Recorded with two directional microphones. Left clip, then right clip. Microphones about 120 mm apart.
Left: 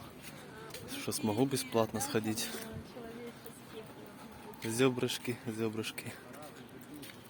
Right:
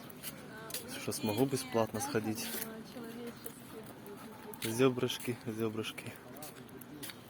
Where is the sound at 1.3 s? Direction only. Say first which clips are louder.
Left 1 dB; 25° left (ahead or behind).